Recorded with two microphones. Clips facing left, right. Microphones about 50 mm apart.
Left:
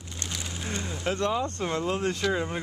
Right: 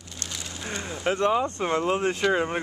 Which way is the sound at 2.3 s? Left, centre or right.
Right.